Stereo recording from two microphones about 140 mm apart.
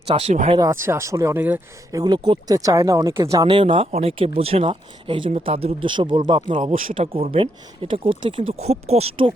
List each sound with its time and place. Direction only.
0.1 s speech: 50° right (ahead or behind)
0.7 s speech: 20° right (ahead or behind)
1.9 s speech: 30° right (ahead or behind)
3.4 s speech: 40° right (ahead or behind)
6.6 s speech: 55° right (ahead or behind)
7.3 s speech: 40° right (ahead or behind)